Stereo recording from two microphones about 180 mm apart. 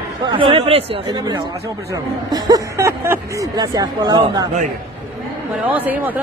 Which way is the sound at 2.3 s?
20° right (ahead or behind).